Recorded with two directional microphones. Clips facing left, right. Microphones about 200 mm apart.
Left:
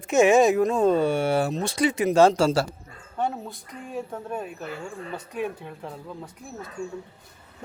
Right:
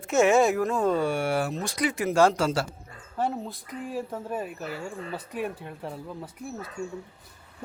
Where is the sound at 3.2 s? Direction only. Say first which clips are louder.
Even; centre (ahead or behind).